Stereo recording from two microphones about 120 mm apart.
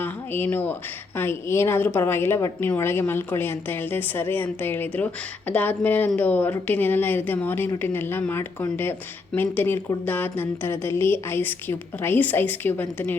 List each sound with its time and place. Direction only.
0.0 s a woman's voice: 15° left (ahead or behind)